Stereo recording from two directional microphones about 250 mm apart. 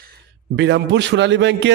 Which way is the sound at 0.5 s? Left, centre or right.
Right.